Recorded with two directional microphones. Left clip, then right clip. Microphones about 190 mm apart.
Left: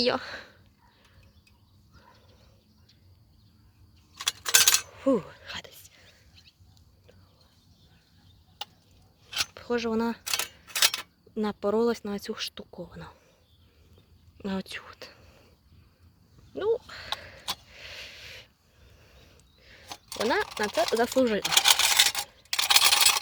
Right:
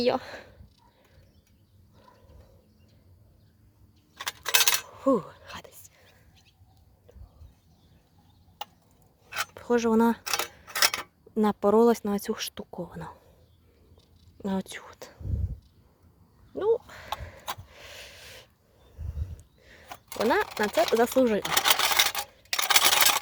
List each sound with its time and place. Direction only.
0.0 s speech: 5° right (ahead or behind)
4.2 s coin: 35° right (ahead or behind)
4.9 s whispering: 5° right (ahead or behind)
9.6 s speech: 30° right (ahead or behind)
14.4 s speech: 15° right (ahead or behind)
16.6 s speech: 10° right (ahead or behind)
17.1 s a sound: 15° right (ahead or behind)
19.6 s a sound: 25° right (ahead or behind)
20.6 s speech: 20° right (ahead or behind)
21.6 s a sound: 25° right (ahead or behind); by 23.2 s 50° right (ahead or behind)